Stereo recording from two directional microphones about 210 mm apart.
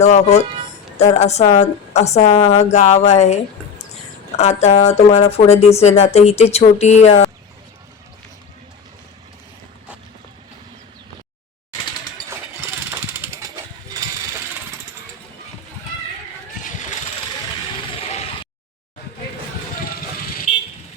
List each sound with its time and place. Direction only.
0.0 s speech: 30° left (ahead or behind)
12.3 s mechanisms: 10° right (ahead or behind)
18.0 s a sound: 30° left (ahead or behind)